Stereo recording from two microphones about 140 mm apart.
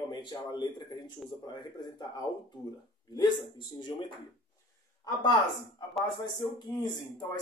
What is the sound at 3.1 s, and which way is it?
Speech, 30° left (ahead or behind).